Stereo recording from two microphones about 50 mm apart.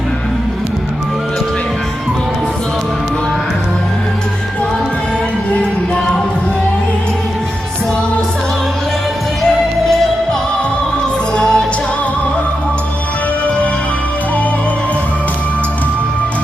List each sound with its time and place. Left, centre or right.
9.8 s music: centre
11.3 s music: centre